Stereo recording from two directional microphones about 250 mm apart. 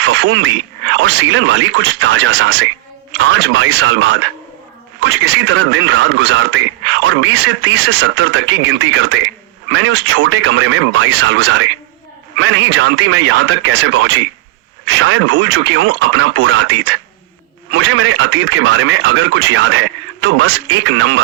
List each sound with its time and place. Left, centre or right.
0.0 s speech: right